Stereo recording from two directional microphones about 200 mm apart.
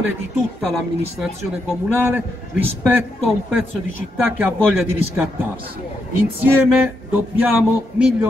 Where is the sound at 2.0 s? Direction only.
10° right (ahead or behind).